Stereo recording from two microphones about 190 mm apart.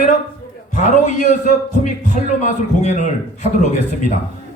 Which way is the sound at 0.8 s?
40° left (ahead or behind).